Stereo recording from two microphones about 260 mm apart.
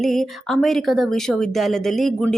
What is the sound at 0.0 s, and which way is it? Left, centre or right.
Speech, centre.